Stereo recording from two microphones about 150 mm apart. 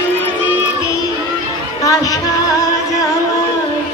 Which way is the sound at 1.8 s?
25° left (ahead or behind).